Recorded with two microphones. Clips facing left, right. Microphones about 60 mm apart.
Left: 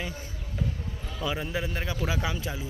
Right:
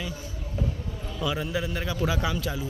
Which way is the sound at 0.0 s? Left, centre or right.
Left.